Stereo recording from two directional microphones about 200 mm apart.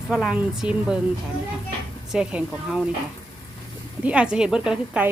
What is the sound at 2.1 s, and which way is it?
Speech, 5° right (ahead or behind).